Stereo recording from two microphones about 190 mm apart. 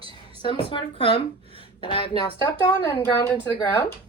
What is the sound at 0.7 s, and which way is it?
A woman's voice, 30° left (ahead or behind).